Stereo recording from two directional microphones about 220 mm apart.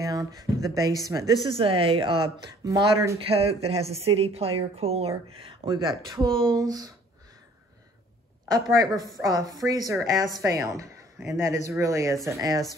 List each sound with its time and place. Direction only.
0.0 s a woman's voice: 15° right (ahead or behind)
3.2 s a woman's voice: 25° right (ahead or behind)
8.8 s a woman's voice: 15° right (ahead or behind)